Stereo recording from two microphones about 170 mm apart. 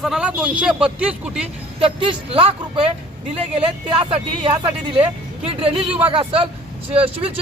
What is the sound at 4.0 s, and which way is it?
Speech, 30° right (ahead or behind).